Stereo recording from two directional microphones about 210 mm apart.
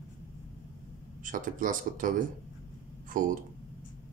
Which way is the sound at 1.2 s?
40° right (ahead or behind).